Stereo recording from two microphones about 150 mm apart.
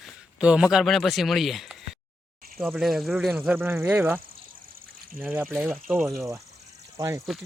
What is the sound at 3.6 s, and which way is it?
Speech, 15° right (ahead or behind).